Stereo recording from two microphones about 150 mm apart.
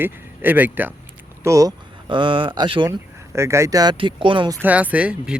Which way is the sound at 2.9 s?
20° right (ahead or behind).